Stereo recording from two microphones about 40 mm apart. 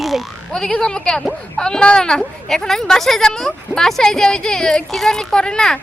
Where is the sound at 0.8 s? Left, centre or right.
Centre.